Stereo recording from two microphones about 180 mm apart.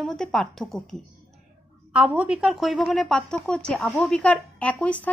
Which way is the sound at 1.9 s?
5° right (ahead or behind).